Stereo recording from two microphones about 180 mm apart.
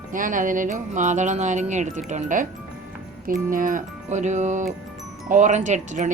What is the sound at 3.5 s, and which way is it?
Speech, 50° right (ahead or behind).